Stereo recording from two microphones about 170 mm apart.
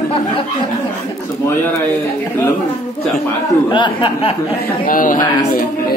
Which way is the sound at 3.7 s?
30° left (ahead or behind).